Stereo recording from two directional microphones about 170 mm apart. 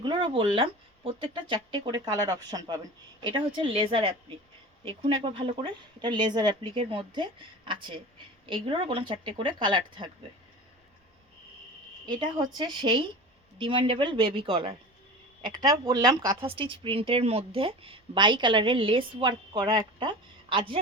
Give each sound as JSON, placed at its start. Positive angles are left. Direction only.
{"t": 0.0, "sound": "speech", "side_deg": -30}
{"t": 12.0, "sound": "speech", "side_deg": -25}